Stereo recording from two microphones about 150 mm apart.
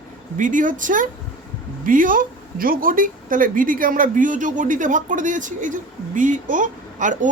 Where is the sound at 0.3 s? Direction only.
60° right (ahead or behind).